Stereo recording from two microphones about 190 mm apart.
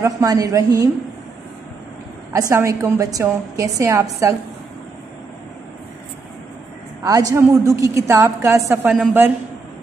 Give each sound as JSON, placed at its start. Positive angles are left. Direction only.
{"t": 0.0, "sound": "a woman's voice", "side_deg": -15}
{"t": 2.3, "sound": "a woman's voice", "side_deg": -15}
{"t": 7.0, "sound": "a woman's voice", "side_deg": -20}